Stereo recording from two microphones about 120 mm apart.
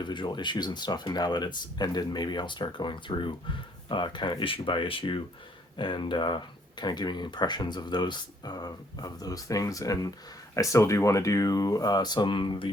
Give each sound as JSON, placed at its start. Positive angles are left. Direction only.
{"t": 0.0, "sound": "speech", "side_deg": 40}